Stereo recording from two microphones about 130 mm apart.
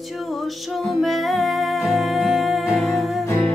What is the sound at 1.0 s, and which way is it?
Music, centre (ahead or behind).